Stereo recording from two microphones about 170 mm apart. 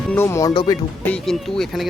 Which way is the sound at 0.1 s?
15° left (ahead or behind).